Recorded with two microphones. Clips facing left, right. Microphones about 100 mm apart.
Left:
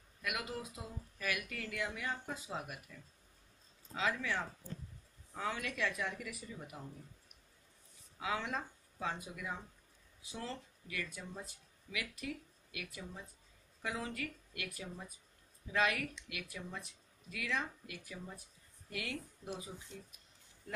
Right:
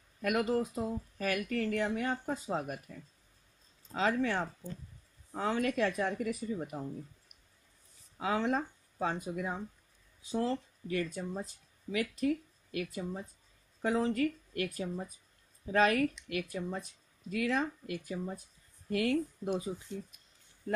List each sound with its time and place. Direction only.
0.2 s speech: 45° right (ahead or behind)
8.2 s speech: 40° right (ahead or behind)